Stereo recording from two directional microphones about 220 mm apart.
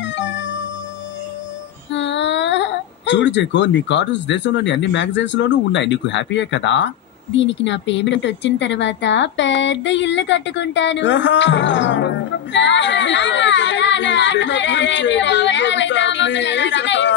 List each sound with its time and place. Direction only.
0.0 s music: 55° left (ahead or behind)
1.9 s a woman's voice: 55° left (ahead or behind)